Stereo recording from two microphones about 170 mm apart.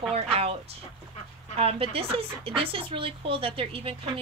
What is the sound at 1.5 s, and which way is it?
A woman's voice, 35° right (ahead or behind).